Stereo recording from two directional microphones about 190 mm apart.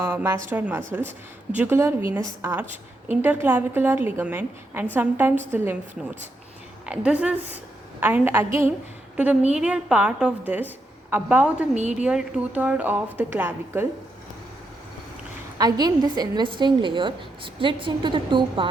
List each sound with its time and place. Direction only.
0.0 s a woman's voice: 15° right (ahead or behind)
6.8 s a woman's voice: 5° right (ahead or behind)
11.8 s a woman's voice: 35° right (ahead or behind)
12.0 s a woman's voice: 5° right (ahead or behind)
15.5 s a woman's voice: 20° right (ahead or behind)